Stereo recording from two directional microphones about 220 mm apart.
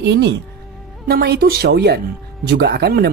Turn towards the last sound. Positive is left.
turn(degrees=-45)  # may be behind; listen again after turning